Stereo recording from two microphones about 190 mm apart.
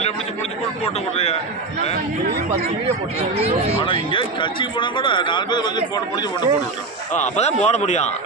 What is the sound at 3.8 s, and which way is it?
Speech, 30° left (ahead or behind).